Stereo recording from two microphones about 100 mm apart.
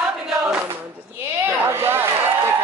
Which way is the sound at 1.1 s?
20° right (ahead or behind).